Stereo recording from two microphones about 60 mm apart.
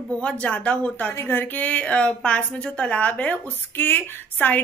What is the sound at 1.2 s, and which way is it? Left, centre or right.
Speech, left.